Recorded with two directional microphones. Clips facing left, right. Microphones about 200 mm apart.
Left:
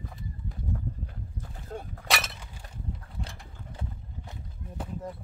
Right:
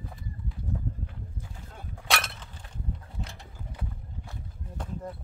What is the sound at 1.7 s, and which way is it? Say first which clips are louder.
Breaking: left 13 dB; 45° left (ahead or behind).